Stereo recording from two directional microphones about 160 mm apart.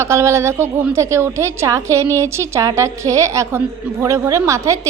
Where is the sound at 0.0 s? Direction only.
20° right (ahead or behind).